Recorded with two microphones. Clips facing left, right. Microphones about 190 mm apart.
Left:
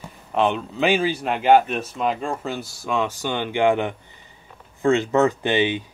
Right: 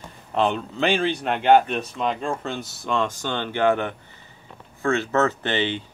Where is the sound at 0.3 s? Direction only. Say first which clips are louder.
Left 1 dB; centre (ahead or behind).